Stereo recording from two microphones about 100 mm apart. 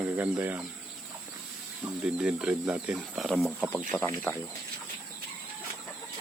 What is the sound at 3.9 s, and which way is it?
Speech, 20° left (ahead or behind).